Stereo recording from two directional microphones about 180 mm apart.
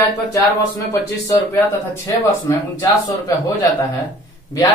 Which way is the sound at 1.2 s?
15° left (ahead or behind).